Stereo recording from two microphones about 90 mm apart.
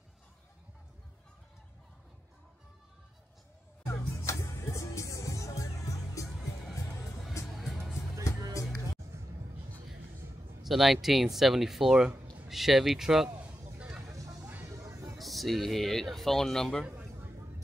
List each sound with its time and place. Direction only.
3.8 s music: 35° left (ahead or behind)
7.4 s music: centre (ahead or behind)
10.6 s speech: centre (ahead or behind)
13.7 s vehicle: 15° right (ahead or behind)
14.0 s vehicle: 40° right (ahead or behind)
14.7 s music: 35° right (ahead or behind)
15.1 s speech: centre (ahead or behind)
16.8 s a sound: 25° right (ahead or behind)